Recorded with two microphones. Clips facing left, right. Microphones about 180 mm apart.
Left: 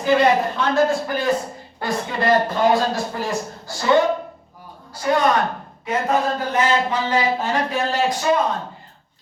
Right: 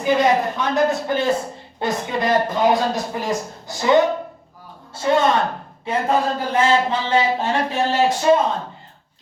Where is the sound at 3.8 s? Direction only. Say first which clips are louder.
Right 1 dB; 20° right (ahead or behind).